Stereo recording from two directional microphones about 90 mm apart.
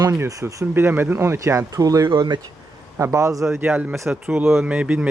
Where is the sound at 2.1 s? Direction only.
60° right (ahead or behind).